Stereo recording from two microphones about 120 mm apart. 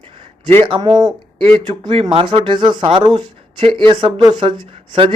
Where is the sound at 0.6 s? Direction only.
40° right (ahead or behind).